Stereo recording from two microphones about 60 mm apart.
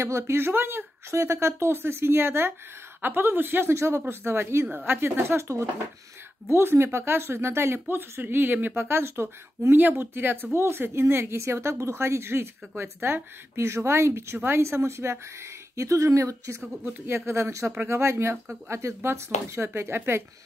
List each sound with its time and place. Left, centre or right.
0.0 s a woman's voice: right
3.7 s a woman's voice: right
6.5 s speech: right